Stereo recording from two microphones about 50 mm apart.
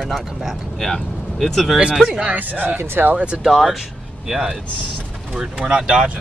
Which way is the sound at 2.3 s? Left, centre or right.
Right.